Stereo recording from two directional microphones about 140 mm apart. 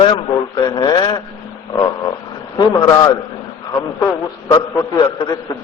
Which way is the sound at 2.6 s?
30° left (ahead or behind).